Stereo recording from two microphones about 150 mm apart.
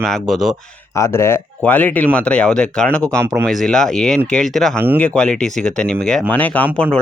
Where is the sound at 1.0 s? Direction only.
20° left (ahead or behind).